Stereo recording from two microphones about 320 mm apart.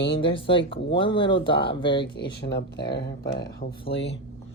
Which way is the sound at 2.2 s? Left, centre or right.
Left.